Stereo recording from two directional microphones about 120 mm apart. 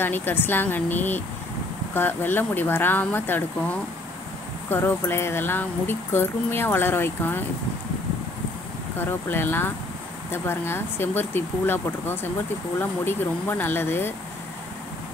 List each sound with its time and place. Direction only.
0.0 s speech: 15° left (ahead or behind)
8.9 s speech: 20° left (ahead or behind)